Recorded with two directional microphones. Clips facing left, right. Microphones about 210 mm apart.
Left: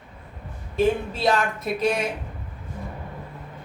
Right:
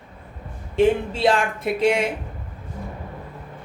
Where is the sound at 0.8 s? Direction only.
30° right (ahead or behind).